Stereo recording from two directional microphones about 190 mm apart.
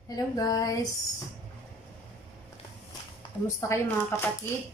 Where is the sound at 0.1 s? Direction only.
20° left (ahead or behind).